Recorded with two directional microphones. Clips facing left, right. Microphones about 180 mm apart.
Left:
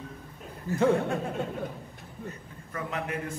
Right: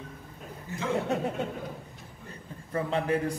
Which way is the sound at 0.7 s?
20° right (ahead or behind).